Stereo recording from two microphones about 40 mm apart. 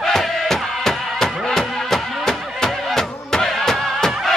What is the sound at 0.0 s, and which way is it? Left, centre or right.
Music, centre.